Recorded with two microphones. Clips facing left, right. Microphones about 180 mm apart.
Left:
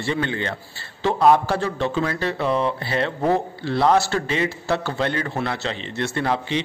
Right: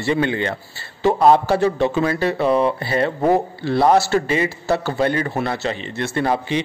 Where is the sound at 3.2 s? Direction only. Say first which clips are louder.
Right 4 dB; 15° right (ahead or behind).